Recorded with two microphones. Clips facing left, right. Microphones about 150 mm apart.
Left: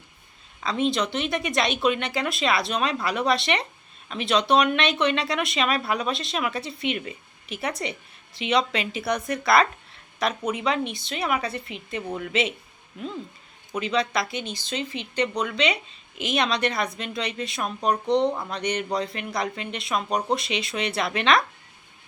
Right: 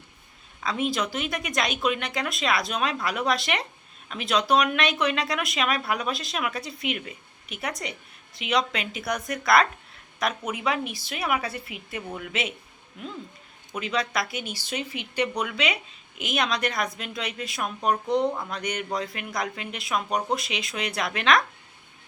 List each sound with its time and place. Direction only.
0.6 s speech: 5° right (ahead or behind)
13.7 s speech: centre (ahead or behind)